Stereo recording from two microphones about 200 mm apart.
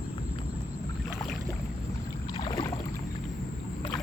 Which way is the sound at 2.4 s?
25° left (ahead or behind).